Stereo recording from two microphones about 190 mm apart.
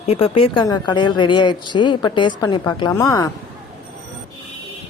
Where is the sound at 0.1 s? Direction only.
30° left (ahead or behind).